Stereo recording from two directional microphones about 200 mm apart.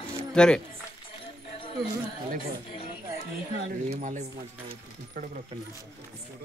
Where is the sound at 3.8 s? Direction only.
40° right (ahead or behind).